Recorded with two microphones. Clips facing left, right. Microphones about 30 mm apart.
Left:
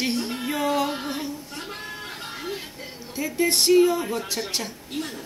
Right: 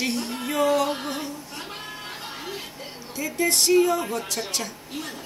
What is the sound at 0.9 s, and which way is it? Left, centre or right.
Music, centre.